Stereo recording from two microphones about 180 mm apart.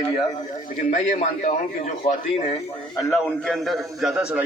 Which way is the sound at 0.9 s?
45° left (ahead or behind).